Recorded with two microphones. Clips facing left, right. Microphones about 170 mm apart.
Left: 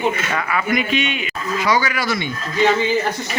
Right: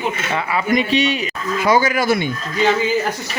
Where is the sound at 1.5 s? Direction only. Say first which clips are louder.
Right 4 dB; 50° right (ahead or behind).